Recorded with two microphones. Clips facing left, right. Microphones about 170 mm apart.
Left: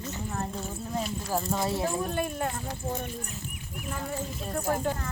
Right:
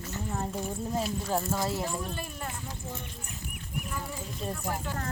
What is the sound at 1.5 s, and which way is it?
Speech, 25° left (ahead or behind).